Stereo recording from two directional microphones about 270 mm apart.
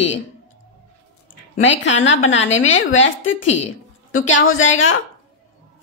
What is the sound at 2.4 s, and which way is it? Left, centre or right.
Speech, left.